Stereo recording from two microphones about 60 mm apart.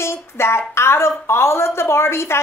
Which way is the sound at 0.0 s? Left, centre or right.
Left.